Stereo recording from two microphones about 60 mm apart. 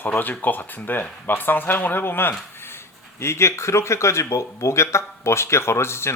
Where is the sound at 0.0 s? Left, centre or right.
Left.